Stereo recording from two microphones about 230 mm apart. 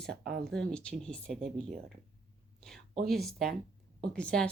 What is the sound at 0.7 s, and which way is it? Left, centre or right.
A woman's voice, centre.